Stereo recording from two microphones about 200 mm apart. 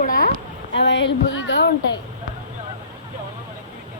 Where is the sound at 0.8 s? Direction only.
60° left (ahead or behind).